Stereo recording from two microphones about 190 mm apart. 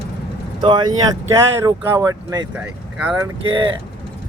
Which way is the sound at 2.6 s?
10° right (ahead or behind).